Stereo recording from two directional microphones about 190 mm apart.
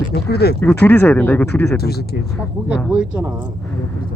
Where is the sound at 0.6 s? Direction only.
10° left (ahead or behind).